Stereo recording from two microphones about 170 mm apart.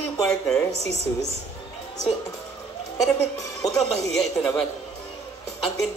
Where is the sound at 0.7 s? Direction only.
40° right (ahead or behind).